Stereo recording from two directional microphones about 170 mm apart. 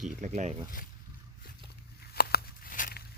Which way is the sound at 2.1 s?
65° left (ahead or behind).